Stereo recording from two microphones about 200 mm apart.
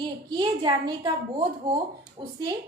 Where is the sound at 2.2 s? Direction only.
25° right (ahead or behind).